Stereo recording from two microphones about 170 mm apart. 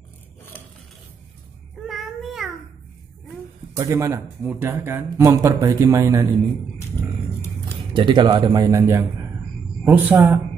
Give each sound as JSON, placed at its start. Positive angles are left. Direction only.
{"t": 1.9, "sound": "meow", "side_deg": 0}
{"t": 3.7, "sound": "speech", "side_deg": -15}
{"t": 7.9, "sound": "a man's voice", "side_deg": -30}